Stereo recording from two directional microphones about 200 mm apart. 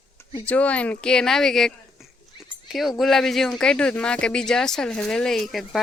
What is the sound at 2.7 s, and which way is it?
Speech, centre (ahead or behind).